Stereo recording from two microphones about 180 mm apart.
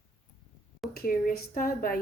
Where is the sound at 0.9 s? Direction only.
55° left (ahead or behind).